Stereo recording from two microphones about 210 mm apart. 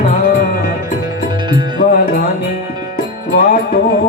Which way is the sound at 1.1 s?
20° right (ahead or behind).